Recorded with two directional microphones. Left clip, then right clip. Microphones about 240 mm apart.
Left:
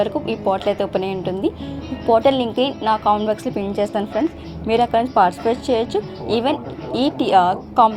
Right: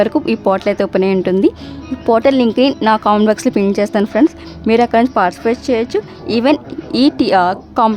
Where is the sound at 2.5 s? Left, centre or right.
Right.